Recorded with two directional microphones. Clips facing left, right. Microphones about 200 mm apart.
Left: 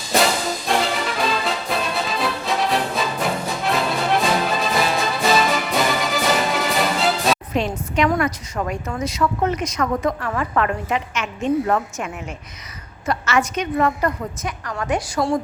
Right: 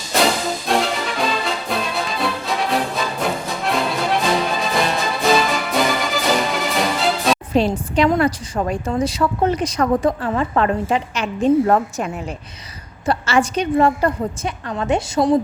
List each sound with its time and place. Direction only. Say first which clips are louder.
0.7 s music: right 1 dB; centre (ahead or behind)
7.5 s a woman's voice: right 5 dB; 30° right (ahead or behind)